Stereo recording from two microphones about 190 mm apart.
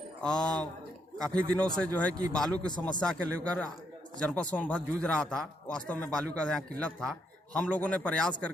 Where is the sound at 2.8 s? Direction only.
5° left (ahead or behind).